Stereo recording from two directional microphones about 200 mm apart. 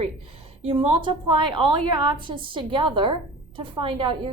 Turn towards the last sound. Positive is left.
turn(degrees=-25)  # may be behind; listen again after turning